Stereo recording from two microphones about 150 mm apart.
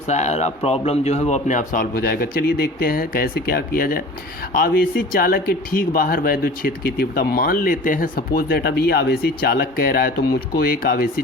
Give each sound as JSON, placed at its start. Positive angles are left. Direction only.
{"t": 0.1, "sound": "speech", "side_deg": 50}